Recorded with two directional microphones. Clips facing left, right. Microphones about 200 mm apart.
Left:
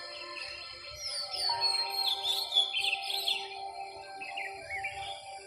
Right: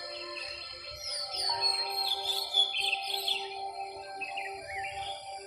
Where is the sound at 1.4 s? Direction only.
40° right (ahead or behind).